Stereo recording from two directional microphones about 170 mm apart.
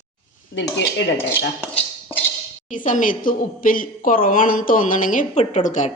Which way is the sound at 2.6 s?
50° left (ahead or behind).